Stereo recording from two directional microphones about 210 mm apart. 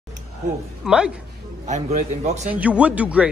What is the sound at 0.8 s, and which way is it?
Speech, 5° right (ahead or behind).